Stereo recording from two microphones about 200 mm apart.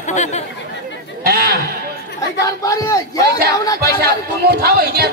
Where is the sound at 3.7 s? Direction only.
55° right (ahead or behind).